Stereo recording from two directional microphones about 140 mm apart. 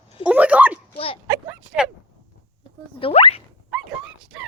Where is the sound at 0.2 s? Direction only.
10° right (ahead or behind).